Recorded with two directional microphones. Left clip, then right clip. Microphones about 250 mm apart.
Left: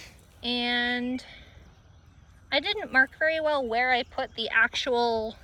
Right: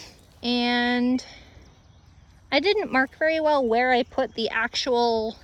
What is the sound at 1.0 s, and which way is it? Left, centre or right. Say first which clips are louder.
Speech: right 8 dB; right.